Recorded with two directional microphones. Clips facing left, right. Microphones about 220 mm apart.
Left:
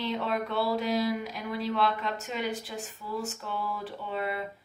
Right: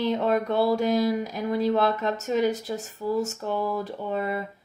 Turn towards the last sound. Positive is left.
turn(degrees=-45)  # may be behind; listen again after turning